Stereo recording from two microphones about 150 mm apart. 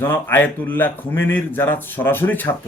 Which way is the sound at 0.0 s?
15° left (ahead or behind).